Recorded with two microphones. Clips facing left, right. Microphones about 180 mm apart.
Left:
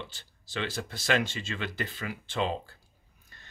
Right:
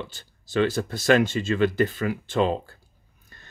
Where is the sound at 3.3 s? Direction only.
50° right (ahead or behind).